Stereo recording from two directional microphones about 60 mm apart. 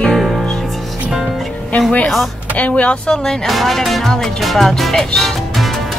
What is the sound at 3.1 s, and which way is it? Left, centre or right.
Speech, centre.